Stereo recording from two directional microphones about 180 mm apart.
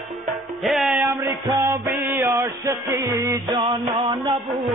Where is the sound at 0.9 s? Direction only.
15° right (ahead or behind).